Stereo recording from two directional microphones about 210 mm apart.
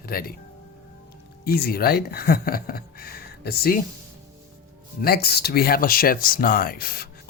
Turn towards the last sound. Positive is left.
turn(degrees=45)  # may be behind; listen again after turning